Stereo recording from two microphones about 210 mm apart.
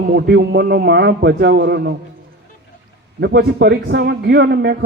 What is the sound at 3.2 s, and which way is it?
Speech, 55° right (ahead or behind).